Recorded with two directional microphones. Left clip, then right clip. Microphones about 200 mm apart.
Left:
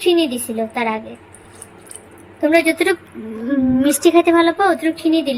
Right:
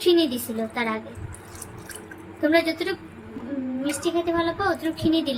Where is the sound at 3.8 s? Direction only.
35° left (ahead or behind); by 5.4 s 15° left (ahead or behind).